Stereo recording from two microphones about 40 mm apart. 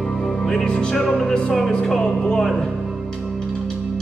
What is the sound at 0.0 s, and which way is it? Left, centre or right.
Music, centre.